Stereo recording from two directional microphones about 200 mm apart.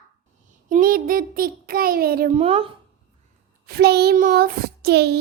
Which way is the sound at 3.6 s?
55° right (ahead or behind).